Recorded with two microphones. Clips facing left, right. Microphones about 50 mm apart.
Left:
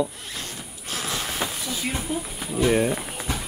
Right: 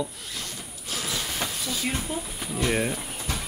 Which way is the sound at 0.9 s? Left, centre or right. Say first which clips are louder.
Left 2 dB; left.